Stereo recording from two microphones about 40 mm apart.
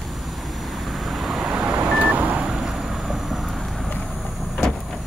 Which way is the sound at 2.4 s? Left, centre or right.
Centre.